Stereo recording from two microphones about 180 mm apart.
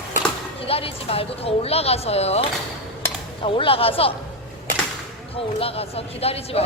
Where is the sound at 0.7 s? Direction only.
30° left (ahead or behind).